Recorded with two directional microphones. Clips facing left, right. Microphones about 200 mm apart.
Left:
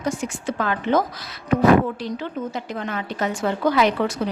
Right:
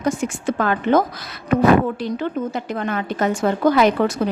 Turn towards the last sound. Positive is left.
turn(degrees=-45)  # may be behind; listen again after turning